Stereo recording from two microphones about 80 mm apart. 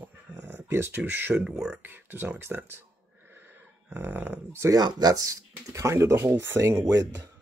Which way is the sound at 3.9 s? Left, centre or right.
Right.